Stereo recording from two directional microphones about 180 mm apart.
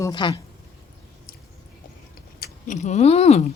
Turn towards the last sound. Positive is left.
turn(degrees=35)  # may be behind; listen again after turning